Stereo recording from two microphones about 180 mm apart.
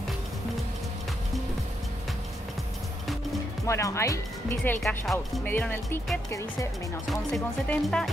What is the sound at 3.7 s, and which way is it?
Speech, 15° left (ahead or behind).